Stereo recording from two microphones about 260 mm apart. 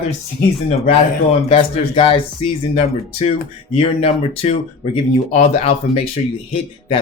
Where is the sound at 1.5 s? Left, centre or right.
Centre.